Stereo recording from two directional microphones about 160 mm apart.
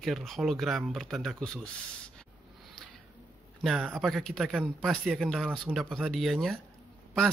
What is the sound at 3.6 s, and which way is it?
Speech, 5° right (ahead or behind).